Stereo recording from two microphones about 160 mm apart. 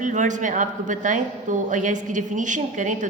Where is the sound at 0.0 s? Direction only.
50° right (ahead or behind).